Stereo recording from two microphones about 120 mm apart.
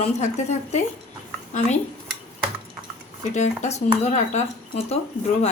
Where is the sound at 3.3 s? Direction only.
80° left.